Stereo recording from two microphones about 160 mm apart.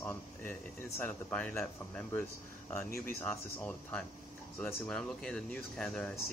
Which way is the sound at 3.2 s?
10° left (ahead or behind).